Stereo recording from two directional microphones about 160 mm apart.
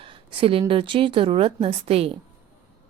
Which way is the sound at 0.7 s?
35° right (ahead or behind).